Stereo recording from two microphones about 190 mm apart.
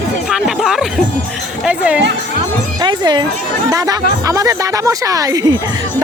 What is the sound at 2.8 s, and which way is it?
Speech, 25° right (ahead or behind).